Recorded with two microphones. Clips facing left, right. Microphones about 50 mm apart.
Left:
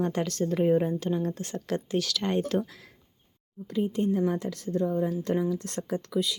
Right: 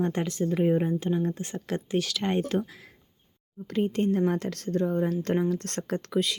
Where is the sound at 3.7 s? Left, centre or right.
Right.